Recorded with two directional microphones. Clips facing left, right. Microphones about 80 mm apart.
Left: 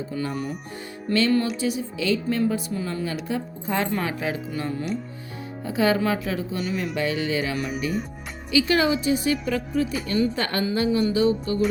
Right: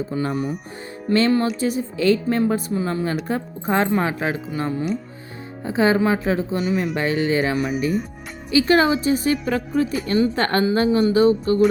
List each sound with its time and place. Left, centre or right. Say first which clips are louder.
0.1 s a woman's voice: right 3 dB; right
1.1 s music: right 4 dB; right
1.5 s a woman's voice: right 4 dB; right